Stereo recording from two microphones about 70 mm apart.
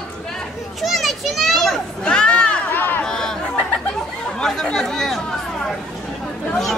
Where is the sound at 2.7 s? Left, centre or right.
Left.